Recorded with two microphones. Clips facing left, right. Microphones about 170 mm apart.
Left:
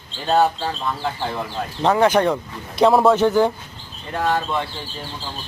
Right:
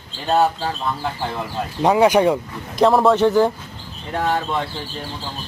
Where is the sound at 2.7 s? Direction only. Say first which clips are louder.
Even; centre (ahead or behind).